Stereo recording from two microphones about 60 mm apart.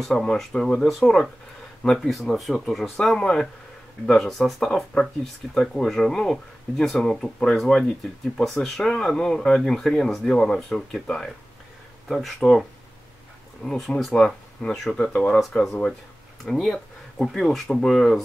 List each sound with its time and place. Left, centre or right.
0.0 s speech: centre
3.0 s speech: centre
4.3 s speech: centre
13.7 s speech: centre